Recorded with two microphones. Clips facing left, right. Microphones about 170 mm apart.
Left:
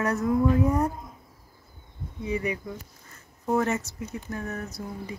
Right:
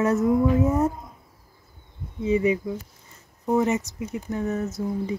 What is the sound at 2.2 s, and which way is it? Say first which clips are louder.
Speech: right 8 dB; 20° right (ahead or behind).